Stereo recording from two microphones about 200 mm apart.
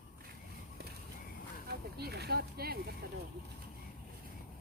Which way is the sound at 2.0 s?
55° right (ahead or behind).